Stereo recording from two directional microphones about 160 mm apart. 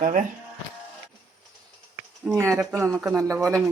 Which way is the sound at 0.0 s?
50° right (ahead or behind).